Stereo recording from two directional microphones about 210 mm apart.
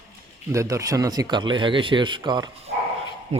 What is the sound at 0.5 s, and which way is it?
Speech, 15° right (ahead or behind).